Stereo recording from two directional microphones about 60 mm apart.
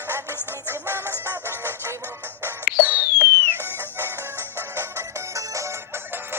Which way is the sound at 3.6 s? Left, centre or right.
Right.